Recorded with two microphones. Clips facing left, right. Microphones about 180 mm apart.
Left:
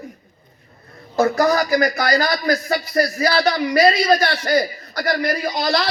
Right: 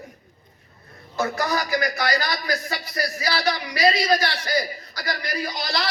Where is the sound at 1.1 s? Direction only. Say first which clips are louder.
Left 8 dB; 40° left (ahead or behind).